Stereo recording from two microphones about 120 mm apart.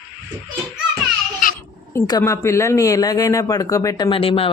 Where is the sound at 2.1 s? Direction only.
30° left (ahead or behind).